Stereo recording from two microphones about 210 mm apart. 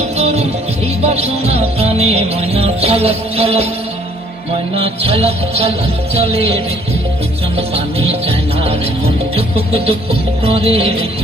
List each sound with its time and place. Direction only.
0.2 s music: 30° right (ahead or behind)
4.7 s music: 25° right (ahead or behind)
7.7 s music: 25° right (ahead or behind)
10.4 s music: 25° right (ahead or behind)